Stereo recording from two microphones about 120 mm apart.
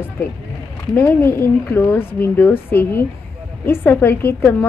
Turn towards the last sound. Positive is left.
turn(degrees=20)  # may be behind; listen again after turning